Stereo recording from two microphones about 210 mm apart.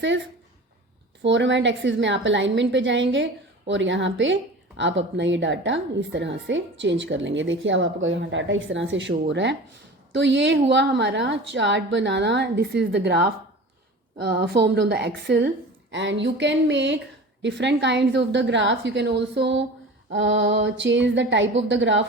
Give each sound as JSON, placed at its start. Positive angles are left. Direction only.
{"t": 1.2, "sound": "a woman's voice", "side_deg": -60}